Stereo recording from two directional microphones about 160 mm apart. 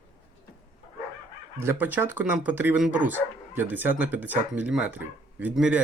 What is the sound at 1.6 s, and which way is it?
Speech, 15° right (ahead or behind).